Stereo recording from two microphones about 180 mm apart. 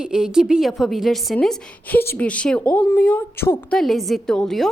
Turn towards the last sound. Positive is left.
turn(degrees=0)  # may be behind; listen again after turning